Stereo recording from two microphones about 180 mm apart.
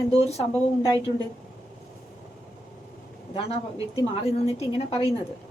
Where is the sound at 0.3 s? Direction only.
35° left (ahead or behind).